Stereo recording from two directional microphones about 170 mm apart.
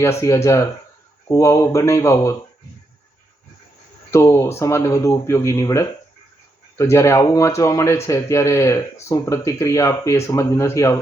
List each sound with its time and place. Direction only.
0.0 s a man's voice: 15° left (ahead or behind)
4.1 s a man's voice: 15° left (ahead or behind)